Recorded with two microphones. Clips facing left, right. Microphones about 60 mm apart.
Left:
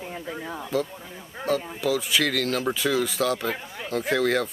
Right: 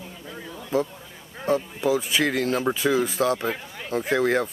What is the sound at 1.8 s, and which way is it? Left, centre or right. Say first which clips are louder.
Speech: right 1 dB; right.